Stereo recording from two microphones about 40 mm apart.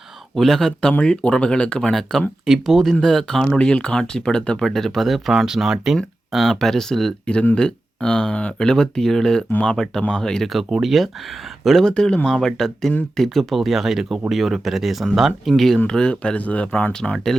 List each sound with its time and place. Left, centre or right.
0.3 s speech: centre
1.0 s speech: left
1.9 s speech: centre
4.6 s speech: centre
5.5 s speech: centre
6.3 s speech: centre
7.5 s speech: left
8.3 s speech: left
8.5 s speech: centre
10.4 s speech: centre
11.9 s speech: left
12.3 s speech: centre
15.5 s speech: centre
15.9 s speech: left